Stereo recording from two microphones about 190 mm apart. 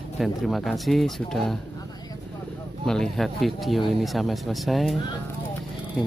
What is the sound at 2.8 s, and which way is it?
Speech, 5° left (ahead or behind).